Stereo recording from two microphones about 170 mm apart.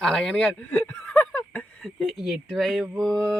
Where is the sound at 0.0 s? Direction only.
Centre (ahead or behind).